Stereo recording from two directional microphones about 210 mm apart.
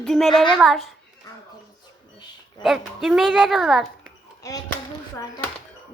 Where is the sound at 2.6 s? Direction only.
Centre (ahead or behind).